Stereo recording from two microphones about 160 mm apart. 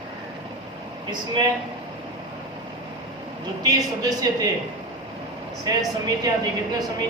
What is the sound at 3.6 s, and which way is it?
Speech, 20° right (ahead or behind).